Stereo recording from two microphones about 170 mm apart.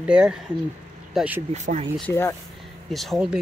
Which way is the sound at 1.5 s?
40° right (ahead or behind).